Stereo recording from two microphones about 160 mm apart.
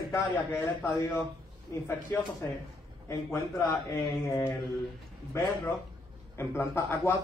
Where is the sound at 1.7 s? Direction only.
15° left (ahead or behind).